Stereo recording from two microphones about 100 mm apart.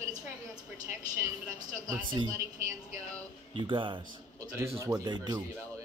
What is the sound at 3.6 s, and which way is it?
Speech, 55° right (ahead or behind).